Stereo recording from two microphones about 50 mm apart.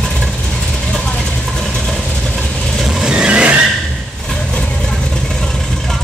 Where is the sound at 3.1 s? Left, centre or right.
Centre.